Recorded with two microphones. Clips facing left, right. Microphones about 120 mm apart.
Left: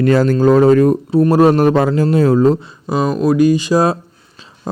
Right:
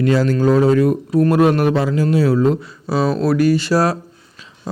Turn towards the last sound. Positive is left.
turn(degrees=20)  # may be behind; listen again after turning